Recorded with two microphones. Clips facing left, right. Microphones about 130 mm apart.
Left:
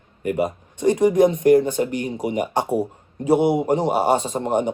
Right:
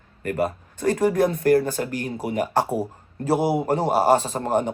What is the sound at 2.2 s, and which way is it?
Speech, centre (ahead or behind).